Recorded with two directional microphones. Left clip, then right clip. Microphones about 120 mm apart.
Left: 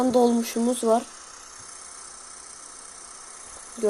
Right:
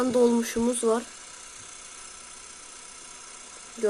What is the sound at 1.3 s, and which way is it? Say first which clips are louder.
Vehicle: left 1 dB; 45° right (ahead or behind).